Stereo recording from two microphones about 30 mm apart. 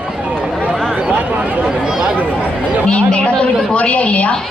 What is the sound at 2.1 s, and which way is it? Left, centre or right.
Speech, right.